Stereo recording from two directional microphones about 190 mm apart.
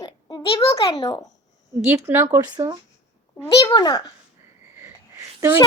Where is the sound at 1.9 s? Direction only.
10° right (ahead or behind).